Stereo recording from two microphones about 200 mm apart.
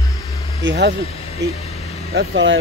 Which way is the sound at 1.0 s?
30° left (ahead or behind).